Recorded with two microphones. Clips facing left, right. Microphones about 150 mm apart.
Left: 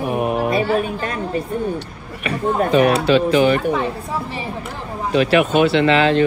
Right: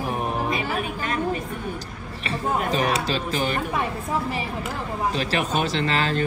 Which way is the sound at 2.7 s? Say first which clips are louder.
Left 9 dB; 40° right (ahead or behind).